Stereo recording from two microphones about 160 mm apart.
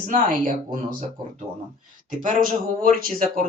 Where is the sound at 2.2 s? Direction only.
55° right (ahead or behind).